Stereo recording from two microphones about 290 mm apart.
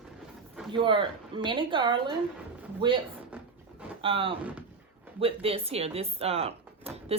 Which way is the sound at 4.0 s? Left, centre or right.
Centre.